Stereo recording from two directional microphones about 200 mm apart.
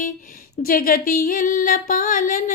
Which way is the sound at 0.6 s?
45° left (ahead or behind).